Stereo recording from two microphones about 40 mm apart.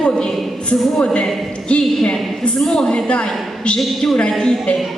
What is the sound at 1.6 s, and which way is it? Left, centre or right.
A man's voice, left.